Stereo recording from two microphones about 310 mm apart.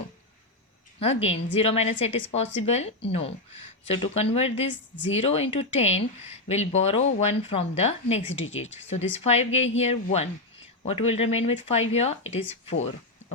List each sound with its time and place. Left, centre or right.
0.9 s a woman's voice: centre
8.3 s speech: left
8.5 s speech: left